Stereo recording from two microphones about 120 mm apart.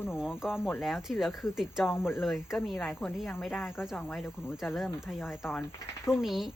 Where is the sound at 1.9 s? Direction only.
20° left (ahead or behind).